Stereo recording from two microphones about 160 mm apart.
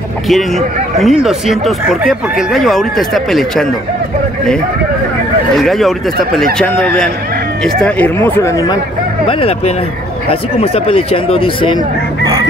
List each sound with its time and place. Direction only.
0.3 s speech: centre (ahead or behind)
5.6 s speech: centre (ahead or behind); by 8.7 s 20° left (ahead or behind)
9.3 s speech: 35° left (ahead or behind)